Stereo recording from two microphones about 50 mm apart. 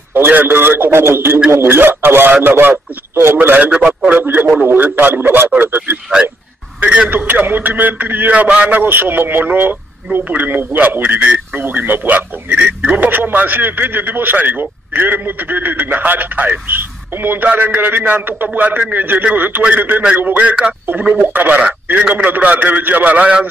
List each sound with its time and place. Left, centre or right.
0.1 s a man's voice: right
6.2 s a man's voice: right
7.1 s a man's voice: right
8.8 s a man's voice: right
20.3 s a man's voice: right
21.1 s a man's voice: right